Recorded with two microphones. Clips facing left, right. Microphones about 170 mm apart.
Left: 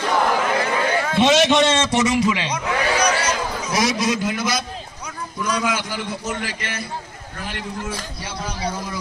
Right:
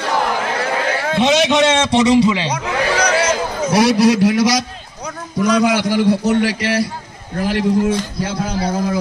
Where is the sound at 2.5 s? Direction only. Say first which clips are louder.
Right 3 dB; 90° right.